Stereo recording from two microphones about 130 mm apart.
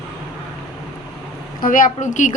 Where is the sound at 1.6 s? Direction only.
90° left; by 2.3 s 75° left (ahead or behind).